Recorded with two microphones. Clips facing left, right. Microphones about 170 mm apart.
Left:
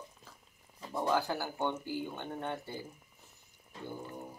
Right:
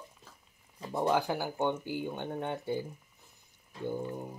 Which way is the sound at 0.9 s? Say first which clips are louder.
Right 3 dB; 20° right (ahead or behind).